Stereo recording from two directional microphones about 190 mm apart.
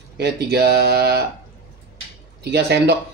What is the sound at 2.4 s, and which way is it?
Speech, 60° right (ahead or behind).